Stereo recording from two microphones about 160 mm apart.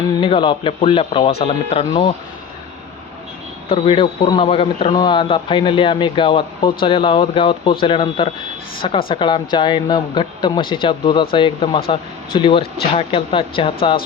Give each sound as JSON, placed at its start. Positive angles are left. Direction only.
{"t": 0.2, "sound": "speech", "side_deg": 35}
{"t": 3.7, "sound": "speech", "side_deg": 35}